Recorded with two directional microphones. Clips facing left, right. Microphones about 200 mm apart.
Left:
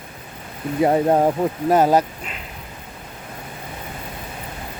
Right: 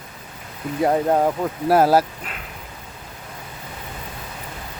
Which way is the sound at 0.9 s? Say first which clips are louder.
Left 1 dB; 15° left (ahead or behind).